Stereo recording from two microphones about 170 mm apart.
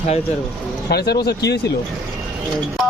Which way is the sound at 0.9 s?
70° left (ahead or behind).